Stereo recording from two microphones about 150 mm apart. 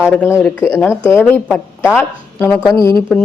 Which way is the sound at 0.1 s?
15° left (ahead or behind).